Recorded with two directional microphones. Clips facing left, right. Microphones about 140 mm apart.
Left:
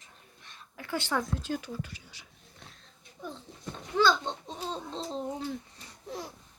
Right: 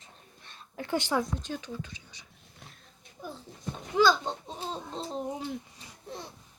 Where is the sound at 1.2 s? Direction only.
5° left (ahead or behind).